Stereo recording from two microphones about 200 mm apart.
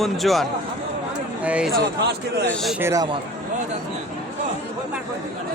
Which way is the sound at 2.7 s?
15° right (ahead or behind).